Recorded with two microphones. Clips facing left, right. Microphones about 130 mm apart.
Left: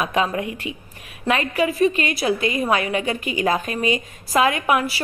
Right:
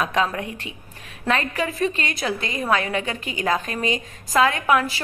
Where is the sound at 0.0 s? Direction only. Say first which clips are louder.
Left 1 dB; 10° left (ahead or behind).